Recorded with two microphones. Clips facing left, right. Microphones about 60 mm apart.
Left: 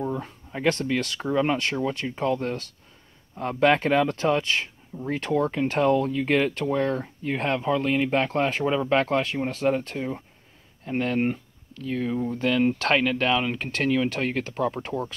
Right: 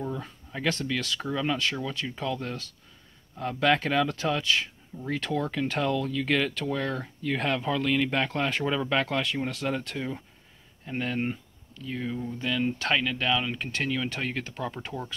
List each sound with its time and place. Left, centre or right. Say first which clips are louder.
0.2 s speech: left 5 dB; left
9.0 s speech: left 4 dB; left
9.9 s speech: left 3 dB; left
10.9 s speech: left 5 dB; left